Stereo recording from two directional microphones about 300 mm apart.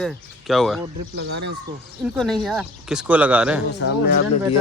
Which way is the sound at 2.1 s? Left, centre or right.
Centre.